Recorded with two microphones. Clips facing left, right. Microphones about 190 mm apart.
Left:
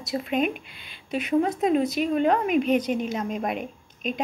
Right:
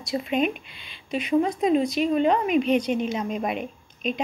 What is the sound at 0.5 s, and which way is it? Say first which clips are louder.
Speech: left 2 dB; 50° left (ahead or behind).